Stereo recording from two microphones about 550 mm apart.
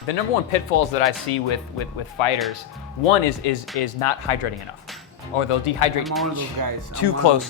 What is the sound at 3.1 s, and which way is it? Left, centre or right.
Speech, left.